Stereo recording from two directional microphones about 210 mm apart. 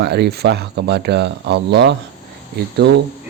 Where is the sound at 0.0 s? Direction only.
50° right (ahead or behind).